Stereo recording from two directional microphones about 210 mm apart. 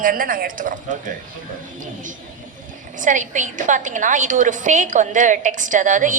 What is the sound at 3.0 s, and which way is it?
A woman's voice, 35° right (ahead or behind).